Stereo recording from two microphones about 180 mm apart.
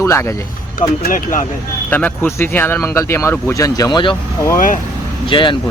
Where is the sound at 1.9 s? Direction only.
10° left (ahead or behind); by 4.2 s 25° left (ahead or behind).